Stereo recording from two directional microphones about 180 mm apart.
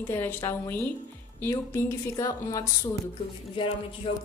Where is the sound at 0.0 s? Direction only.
10° left (ahead or behind).